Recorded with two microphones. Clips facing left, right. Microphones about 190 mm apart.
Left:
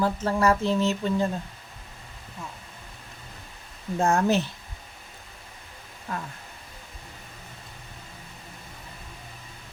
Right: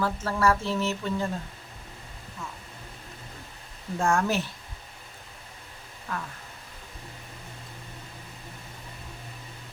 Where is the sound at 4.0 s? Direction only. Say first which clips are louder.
Left 3 dB; 20° left (ahead or behind).